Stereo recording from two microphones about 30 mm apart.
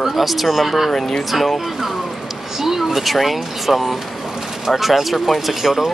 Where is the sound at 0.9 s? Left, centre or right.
Centre.